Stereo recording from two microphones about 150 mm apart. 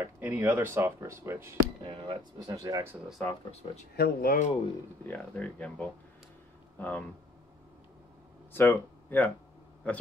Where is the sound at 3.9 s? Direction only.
85° left.